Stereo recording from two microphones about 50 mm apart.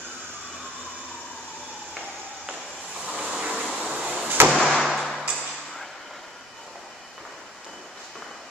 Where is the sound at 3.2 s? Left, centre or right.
Centre.